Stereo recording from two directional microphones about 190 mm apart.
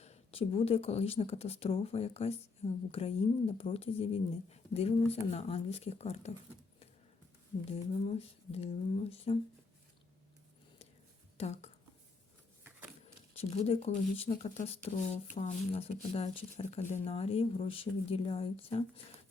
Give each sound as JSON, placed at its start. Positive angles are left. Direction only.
{"t": 0.0, "sound": "speech", "side_deg": 35}
{"t": 8.0, "sound": "speech", "side_deg": 30}
{"t": 11.3, "sound": "speech", "side_deg": 35}
{"t": 13.3, "sound": "speech", "side_deg": 30}